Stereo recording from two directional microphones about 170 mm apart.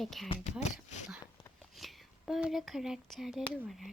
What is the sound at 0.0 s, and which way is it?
Speech, centre (ahead or behind).